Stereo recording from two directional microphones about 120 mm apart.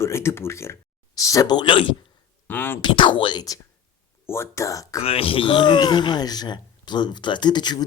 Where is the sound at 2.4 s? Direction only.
15° left (ahead or behind).